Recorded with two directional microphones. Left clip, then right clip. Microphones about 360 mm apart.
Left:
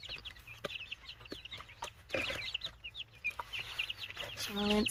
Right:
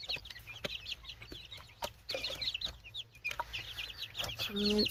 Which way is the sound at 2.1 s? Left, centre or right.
Right.